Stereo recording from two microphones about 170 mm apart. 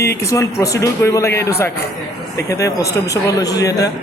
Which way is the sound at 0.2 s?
20° left (ahead or behind).